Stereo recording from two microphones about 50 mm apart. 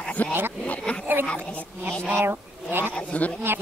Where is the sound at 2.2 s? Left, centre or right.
Right.